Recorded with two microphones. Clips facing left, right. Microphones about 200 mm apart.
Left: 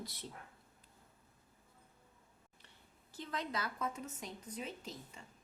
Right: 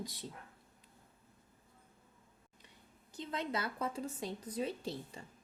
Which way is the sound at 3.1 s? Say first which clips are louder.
Right 3 dB; 25° right (ahead or behind).